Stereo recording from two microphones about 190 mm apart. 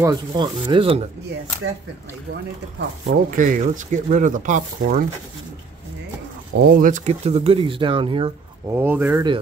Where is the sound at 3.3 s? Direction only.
45° right (ahead or behind).